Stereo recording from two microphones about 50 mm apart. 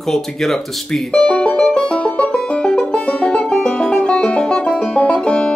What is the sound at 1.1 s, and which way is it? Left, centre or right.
Music, left.